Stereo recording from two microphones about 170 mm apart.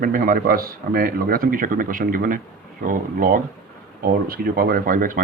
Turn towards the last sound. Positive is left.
turn(degrees=-55)  # may be behind; listen again after turning